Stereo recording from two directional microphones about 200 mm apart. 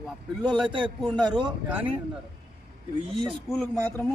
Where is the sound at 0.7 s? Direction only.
25° right (ahead or behind).